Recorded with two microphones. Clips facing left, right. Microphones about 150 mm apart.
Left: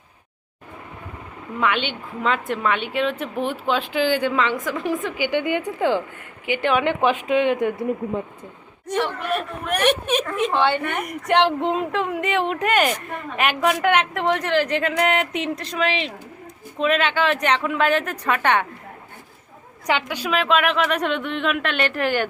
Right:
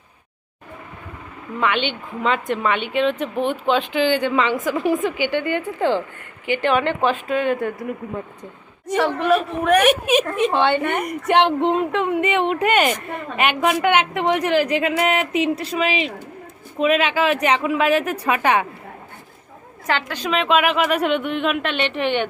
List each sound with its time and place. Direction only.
1.5 s speech: 5° left (ahead or behind)
5.2 s speech: 15° left (ahead or behind)
9.0 s speech: 90° right
9.9 s a woman's voice: 10° right (ahead or behind)
10.5 s a woman's voice: 20° right (ahead or behind)
10.9 s a woman's voice: centre (ahead or behind)
19.9 s speech: 15° left (ahead or behind)